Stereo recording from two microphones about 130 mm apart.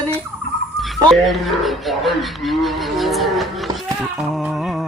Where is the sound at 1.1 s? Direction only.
Centre (ahead or behind).